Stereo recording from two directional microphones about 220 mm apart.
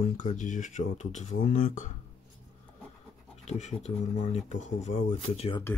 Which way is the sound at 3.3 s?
30° left (ahead or behind).